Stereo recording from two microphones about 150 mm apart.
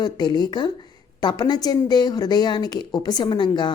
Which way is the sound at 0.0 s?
30° left (ahead or behind).